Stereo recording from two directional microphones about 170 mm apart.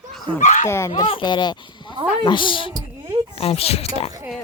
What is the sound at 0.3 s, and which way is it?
Speech, 45° left (ahead or behind).